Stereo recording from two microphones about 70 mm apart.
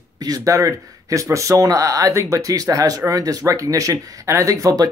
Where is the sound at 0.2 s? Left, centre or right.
Right.